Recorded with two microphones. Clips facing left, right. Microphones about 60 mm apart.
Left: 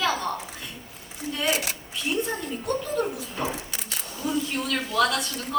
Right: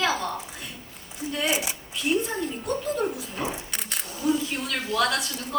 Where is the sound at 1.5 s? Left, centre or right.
Left.